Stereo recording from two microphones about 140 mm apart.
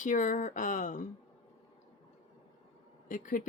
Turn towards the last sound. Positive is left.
turn(degrees=70)  # may be behind; listen again after turning